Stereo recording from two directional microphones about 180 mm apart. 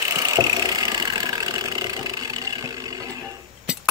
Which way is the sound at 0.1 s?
20° right (ahead or behind).